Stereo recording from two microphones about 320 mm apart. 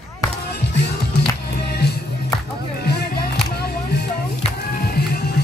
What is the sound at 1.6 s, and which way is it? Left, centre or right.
Music, left.